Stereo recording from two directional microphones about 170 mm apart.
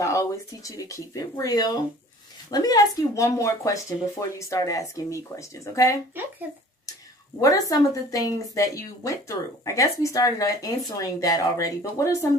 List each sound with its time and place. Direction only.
0.0 s a woman's voice: 20° left (ahead or behind)
6.2 s speech: 10° right (ahead or behind)
7.3 s a woman's voice: 20° left (ahead or behind)